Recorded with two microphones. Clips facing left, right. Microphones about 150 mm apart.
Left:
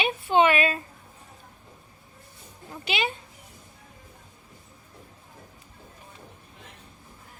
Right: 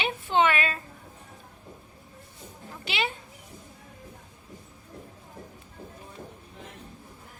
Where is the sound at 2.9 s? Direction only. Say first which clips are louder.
Left 2 dB; 15° left (ahead or behind).